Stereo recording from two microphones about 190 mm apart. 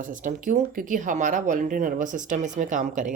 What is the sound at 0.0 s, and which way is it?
Speech, 45° right (ahead or behind).